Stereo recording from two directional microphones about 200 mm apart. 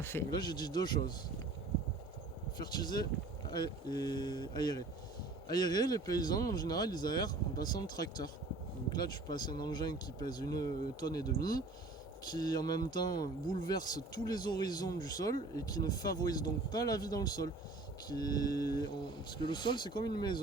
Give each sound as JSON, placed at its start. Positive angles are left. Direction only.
{"t": 0.0, "sound": "speech", "side_deg": 10}
{"t": 2.6, "sound": "speech", "side_deg": 20}
{"t": 11.3, "sound": "speech", "side_deg": 45}
{"t": 12.3, "sound": "speech", "side_deg": 20}